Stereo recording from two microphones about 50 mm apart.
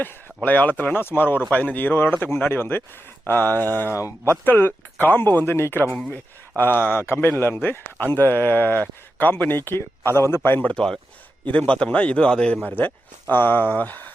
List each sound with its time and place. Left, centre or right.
0.4 s speech: left
6.6 s speech: left
10.6 s a man's voice: left
12.6 s speech: left